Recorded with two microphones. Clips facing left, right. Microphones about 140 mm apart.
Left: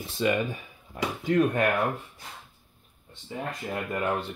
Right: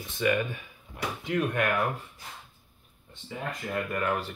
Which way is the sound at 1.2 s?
40° left (ahead or behind).